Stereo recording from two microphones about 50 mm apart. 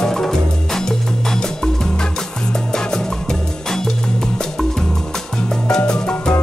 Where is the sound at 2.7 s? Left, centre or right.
Centre.